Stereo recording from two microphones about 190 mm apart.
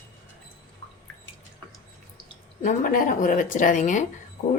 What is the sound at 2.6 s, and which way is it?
Speech, 45° left (ahead or behind).